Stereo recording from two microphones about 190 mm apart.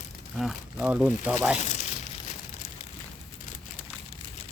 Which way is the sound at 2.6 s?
40° left (ahead or behind).